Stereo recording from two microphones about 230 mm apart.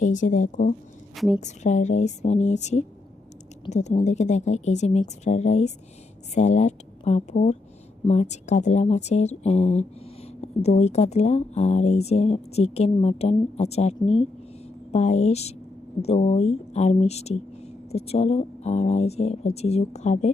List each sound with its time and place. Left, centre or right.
0.0 s speech: left
1.1 s a woman's voice: centre
1.4 s speech: left